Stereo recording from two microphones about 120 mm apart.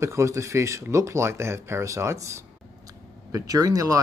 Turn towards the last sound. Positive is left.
turn(degrees=-30)  # may be behind; listen again after turning